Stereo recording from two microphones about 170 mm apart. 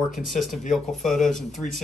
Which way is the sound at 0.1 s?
Centre (ahead or behind).